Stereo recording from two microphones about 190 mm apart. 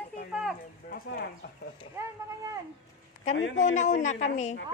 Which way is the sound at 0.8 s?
50° left (ahead or behind).